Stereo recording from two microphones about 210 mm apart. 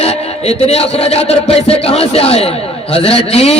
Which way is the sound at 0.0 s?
30° left (ahead or behind).